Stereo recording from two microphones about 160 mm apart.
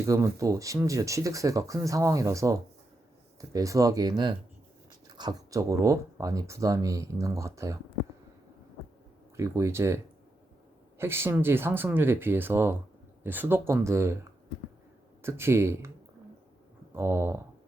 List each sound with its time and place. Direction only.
0.0 s speech: 20° right (ahead or behind)
9.3 s speech: 20° right (ahead or behind)
15.2 s speech: 15° right (ahead or behind)
16.9 s speech: 15° right (ahead or behind)